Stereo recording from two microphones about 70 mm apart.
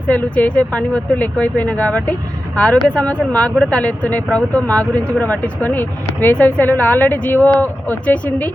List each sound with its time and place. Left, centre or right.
0.1 s speech: left